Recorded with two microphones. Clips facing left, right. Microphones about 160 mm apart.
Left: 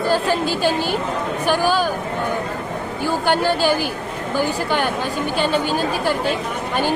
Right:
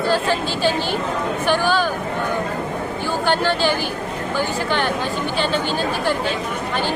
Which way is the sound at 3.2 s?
10° left (ahead or behind).